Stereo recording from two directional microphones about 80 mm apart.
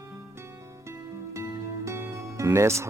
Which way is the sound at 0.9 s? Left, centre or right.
Right.